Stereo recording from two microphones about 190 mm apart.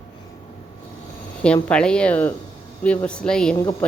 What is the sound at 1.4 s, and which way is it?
A woman's voice, 5° left (ahead or behind).